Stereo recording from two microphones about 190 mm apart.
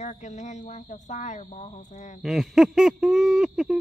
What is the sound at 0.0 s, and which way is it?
Speech, 35° left (ahead or behind).